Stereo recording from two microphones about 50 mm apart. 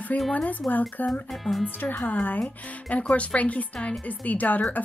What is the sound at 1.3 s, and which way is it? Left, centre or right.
Speech, centre.